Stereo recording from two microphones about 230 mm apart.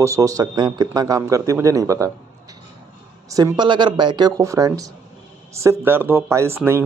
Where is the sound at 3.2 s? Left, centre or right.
Centre.